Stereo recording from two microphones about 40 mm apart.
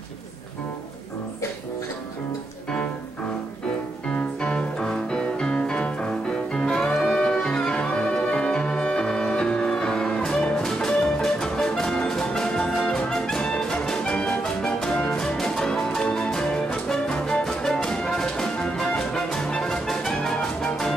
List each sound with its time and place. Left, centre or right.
4.1 s music: left